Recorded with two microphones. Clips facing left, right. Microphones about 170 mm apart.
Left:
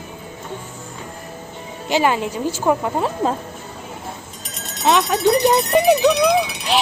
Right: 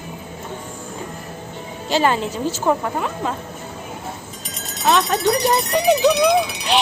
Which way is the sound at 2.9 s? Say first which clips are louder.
Left 4 dB; 35° left (ahead or behind).